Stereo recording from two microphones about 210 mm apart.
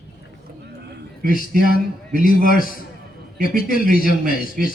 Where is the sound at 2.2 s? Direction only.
40° left (ahead or behind).